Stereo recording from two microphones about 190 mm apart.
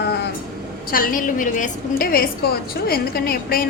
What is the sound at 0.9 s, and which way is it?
A woman's voice, 50° left (ahead or behind).